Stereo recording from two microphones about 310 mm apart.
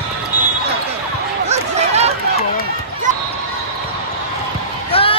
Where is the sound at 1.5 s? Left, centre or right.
Right.